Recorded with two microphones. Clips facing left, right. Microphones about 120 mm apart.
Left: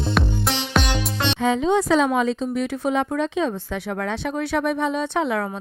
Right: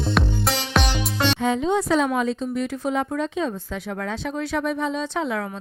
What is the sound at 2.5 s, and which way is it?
Speech, 70° left (ahead or behind).